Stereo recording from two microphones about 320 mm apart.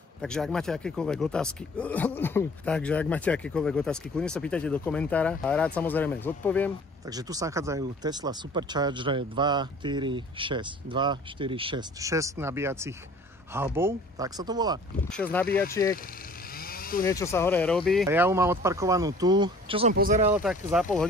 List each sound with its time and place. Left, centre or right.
0.2 s speech: centre
7.1 s speech: centre
15.7 s speech: centre
16.5 s vehicle: left
17.0 s speech: centre; by 20.3 s right
20.3 s speech: centre